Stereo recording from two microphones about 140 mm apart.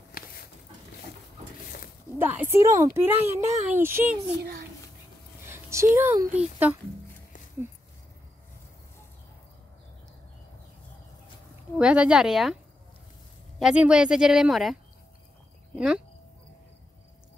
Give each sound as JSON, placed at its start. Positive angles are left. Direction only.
{"t": 0.2, "sound": "a sound", "side_deg": 90}
{"t": 2.1, "sound": "speech", "side_deg": -15}
{"t": 5.4, "sound": "a sound", "side_deg": -20}
{"t": 6.3, "sound": "speech", "side_deg": -10}
{"t": 11.7, "sound": "speech", "side_deg": -10}
{"t": 13.6, "sound": "speech", "side_deg": -5}